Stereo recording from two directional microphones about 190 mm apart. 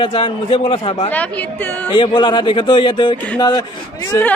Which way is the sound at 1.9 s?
25° left (ahead or behind).